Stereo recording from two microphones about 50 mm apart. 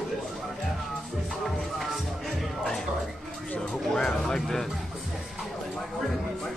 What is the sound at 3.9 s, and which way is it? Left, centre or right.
Music, centre.